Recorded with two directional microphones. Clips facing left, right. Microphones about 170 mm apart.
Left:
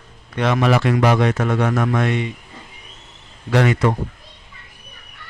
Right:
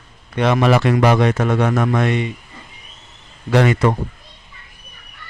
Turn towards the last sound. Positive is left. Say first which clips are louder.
# right 2 dB
turn(degrees=-30)  # may be behind; listen again after turning